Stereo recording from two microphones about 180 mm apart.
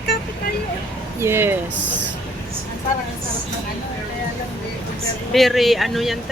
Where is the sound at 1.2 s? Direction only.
15° right (ahead or behind).